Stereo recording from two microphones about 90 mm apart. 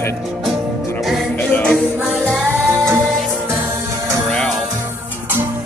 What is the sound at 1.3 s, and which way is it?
Music, 20° left (ahead or behind).